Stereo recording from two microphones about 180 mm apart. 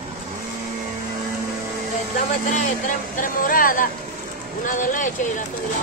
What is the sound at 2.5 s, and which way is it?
Speech, 50° left (ahead or behind).